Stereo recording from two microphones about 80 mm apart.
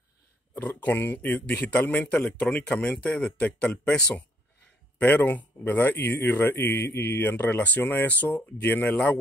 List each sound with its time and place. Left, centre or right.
0.6 s speech: left